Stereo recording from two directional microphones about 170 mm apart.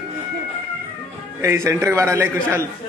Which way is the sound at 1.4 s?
15° right (ahead or behind).